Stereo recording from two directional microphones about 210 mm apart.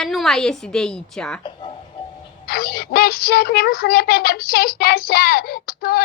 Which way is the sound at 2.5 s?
45° left (ahead or behind).